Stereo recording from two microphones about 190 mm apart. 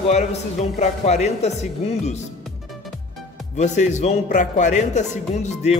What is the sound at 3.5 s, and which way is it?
Speech, 40° left (ahead or behind).